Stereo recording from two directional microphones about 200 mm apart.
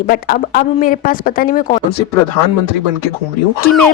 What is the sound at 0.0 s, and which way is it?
A woman's voice, 45° left (ahead or behind).